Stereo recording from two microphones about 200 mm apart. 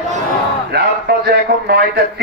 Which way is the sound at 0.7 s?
50° right (ahead or behind).